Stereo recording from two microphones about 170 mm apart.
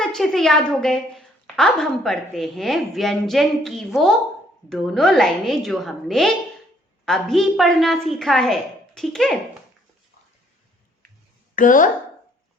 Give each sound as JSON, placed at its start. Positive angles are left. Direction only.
{"t": 0.0, "sound": "a woman's voice", "side_deg": 0}
{"t": 11.5, "sound": "a woman's voice", "side_deg": 50}